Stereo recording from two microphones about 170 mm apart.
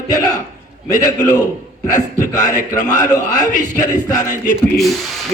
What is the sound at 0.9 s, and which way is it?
Speech, 20° left (ahead or behind).